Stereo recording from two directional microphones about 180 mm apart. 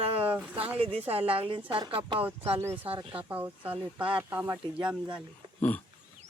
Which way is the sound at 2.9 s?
30° right (ahead or behind).